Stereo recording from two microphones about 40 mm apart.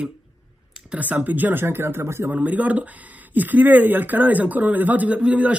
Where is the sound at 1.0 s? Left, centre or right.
Right.